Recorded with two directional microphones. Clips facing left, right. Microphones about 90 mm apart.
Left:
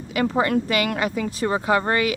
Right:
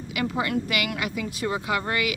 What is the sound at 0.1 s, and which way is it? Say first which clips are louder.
Speech: left 6 dB; 40° left (ahead or behind).